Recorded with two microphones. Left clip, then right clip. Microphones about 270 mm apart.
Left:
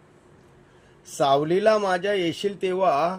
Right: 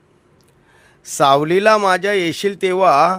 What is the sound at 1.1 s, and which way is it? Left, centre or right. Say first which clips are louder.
A man's voice: right 7 dB; right.